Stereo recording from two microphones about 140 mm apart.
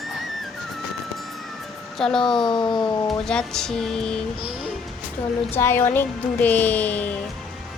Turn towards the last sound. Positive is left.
turn(degrees=10)  # may be behind; listen again after turning